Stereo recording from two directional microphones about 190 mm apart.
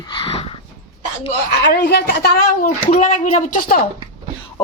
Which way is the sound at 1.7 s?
55° left (ahead or behind).